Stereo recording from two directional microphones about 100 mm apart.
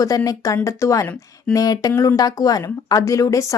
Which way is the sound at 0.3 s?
35° left (ahead or behind).